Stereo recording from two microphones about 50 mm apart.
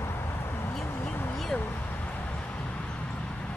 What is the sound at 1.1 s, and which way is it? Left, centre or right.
Vehicle, left.